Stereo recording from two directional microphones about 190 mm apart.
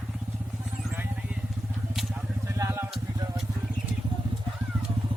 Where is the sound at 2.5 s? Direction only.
15° right (ahead or behind).